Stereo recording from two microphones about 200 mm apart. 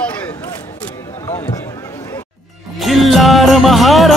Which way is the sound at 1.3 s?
15° left (ahead or behind).